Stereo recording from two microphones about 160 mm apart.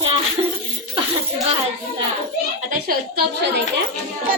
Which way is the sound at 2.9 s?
90° right.